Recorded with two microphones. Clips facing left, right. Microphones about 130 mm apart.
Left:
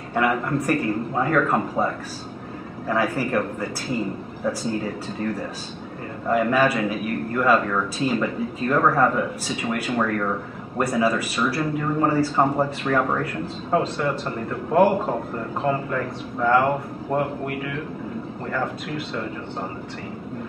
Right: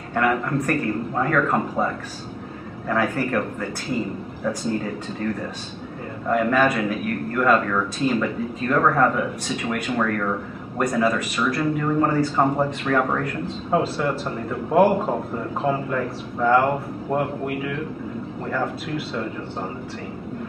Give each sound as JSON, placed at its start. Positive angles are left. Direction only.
{"t": 0.1, "sound": "speech", "side_deg": 5}
{"t": 2.9, "sound": "speech", "side_deg": 10}
{"t": 6.2, "sound": "speech", "side_deg": 5}
{"t": 18.5, "sound": "speech", "side_deg": -5}